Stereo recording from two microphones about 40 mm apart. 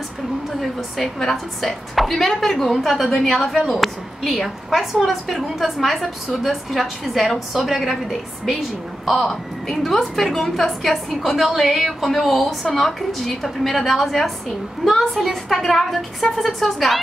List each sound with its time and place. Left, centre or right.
0.6 s a woman's voice: centre